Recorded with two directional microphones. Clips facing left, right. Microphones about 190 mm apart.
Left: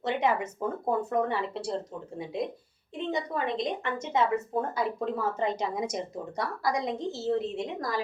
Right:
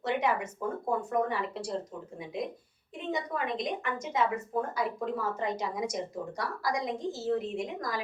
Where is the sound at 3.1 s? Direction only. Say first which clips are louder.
Left 2 dB; 30° left (ahead or behind).